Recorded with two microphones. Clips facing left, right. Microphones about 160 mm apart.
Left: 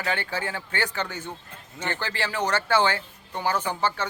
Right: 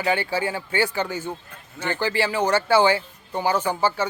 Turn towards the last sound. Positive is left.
turn(degrees=-10)  # may be behind; listen again after turning